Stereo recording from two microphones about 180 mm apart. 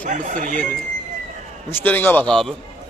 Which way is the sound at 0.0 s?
45° right (ahead or behind).